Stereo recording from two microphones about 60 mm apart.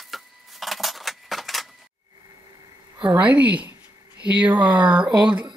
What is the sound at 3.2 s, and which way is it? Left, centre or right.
Speech, right.